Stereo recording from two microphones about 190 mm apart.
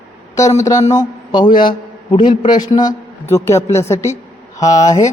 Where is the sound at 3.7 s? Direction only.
15° left (ahead or behind).